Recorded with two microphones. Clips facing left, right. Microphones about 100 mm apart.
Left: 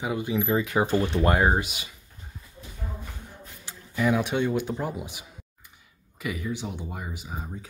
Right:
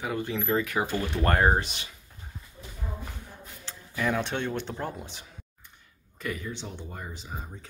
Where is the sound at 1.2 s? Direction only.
5° left (ahead or behind).